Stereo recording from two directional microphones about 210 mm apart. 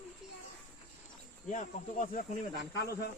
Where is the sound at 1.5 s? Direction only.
35° left (ahead or behind).